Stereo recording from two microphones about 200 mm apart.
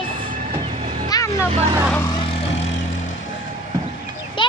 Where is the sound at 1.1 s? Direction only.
20° left (ahead or behind).